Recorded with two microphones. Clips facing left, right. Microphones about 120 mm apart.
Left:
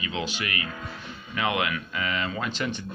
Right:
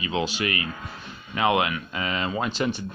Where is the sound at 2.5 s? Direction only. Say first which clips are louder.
Right 4 dB; 15° right (ahead or behind).